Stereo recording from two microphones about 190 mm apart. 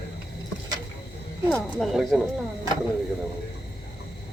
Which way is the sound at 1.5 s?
5° left (ahead or behind).